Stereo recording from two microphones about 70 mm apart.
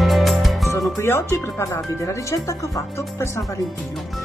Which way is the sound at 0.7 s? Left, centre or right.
Left.